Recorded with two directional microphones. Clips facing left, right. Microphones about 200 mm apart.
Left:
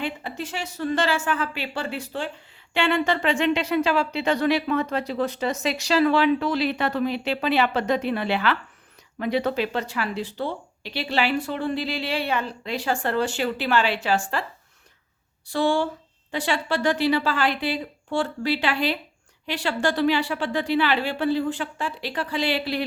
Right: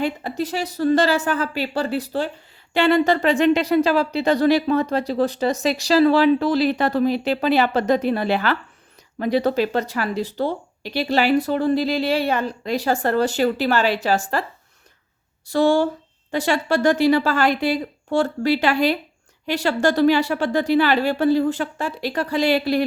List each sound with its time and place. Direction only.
0.0 s speech: 40° right (ahead or behind)
15.4 s a woman's voice: 45° right (ahead or behind)